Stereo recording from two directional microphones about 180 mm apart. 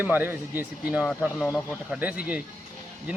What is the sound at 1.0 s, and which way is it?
Speech, centre (ahead or behind).